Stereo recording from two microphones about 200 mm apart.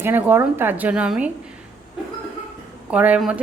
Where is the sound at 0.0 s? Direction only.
10° right (ahead or behind).